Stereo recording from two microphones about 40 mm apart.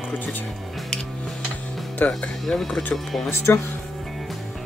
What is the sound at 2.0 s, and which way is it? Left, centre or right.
Speech, left.